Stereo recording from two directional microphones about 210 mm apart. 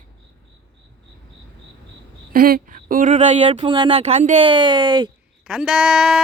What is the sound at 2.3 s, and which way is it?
Speech, 45° right (ahead or behind).